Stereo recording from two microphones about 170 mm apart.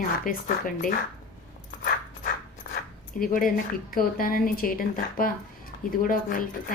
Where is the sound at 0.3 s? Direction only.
55° left (ahead or behind).